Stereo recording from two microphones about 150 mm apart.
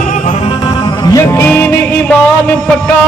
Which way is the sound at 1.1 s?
20° left (ahead or behind).